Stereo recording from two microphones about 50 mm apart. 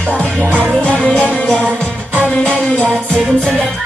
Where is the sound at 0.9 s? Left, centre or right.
Left.